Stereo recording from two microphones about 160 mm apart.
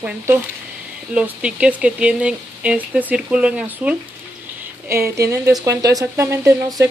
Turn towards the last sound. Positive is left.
turn(degrees=-15)  # may be behind; listen again after turning